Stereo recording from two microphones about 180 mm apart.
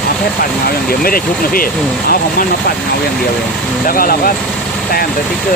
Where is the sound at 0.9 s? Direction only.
55° left (ahead or behind).